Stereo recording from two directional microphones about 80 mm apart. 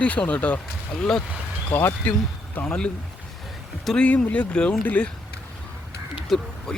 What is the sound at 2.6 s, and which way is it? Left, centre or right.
Speech, centre.